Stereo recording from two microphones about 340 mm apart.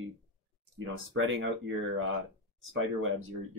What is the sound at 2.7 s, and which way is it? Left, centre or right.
Speech, right.